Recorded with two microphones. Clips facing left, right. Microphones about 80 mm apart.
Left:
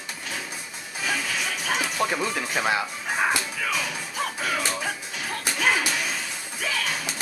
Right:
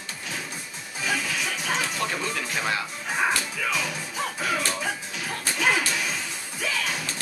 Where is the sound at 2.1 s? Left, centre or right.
Centre.